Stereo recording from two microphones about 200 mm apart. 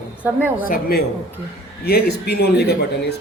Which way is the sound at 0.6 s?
45° left (ahead or behind).